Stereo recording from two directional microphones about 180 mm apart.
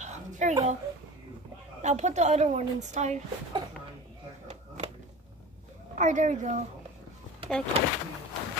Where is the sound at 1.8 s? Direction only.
40° right (ahead or behind).